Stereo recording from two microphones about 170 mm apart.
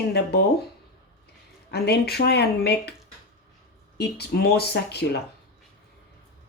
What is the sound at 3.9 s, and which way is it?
Speech, 70° left (ahead or behind).